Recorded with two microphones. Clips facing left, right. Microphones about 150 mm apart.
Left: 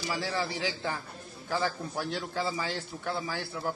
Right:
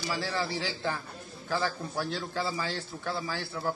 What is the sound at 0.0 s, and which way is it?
Speech, 20° left (ahead or behind).